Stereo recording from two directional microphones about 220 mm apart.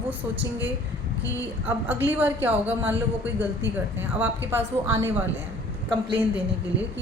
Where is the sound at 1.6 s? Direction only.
10° right (ahead or behind).